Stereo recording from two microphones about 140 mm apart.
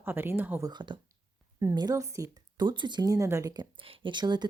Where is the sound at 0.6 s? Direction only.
35° right (ahead or behind).